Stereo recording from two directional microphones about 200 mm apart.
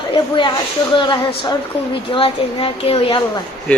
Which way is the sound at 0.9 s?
25° left (ahead or behind).